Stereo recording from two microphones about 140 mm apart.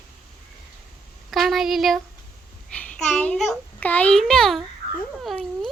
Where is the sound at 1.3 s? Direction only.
Centre (ahead or behind).